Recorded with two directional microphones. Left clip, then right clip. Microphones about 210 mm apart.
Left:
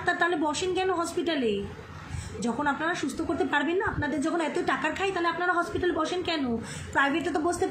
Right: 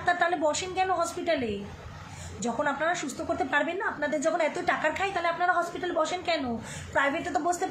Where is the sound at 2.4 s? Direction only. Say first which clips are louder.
Even; 15° right (ahead or behind).